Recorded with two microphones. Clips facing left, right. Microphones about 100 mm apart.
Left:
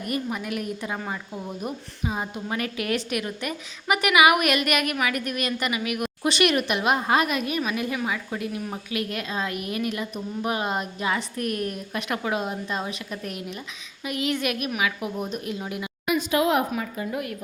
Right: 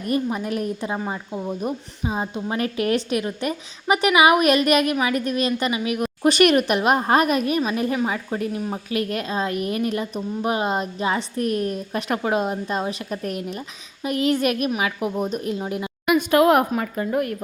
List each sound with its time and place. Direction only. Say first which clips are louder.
0.1 s a woman's voice: right 6 dB; 30° right (ahead or behind)
6.3 s a woman's voice: right 5 dB; 45° right (ahead or behind); by 8.8 s 25° right (ahead or behind)
8.9 s a woman's voice: right 5 dB; 40° right (ahead or behind)
16.0 s a woman's voice: right 6 dB; 55° right (ahead or behind)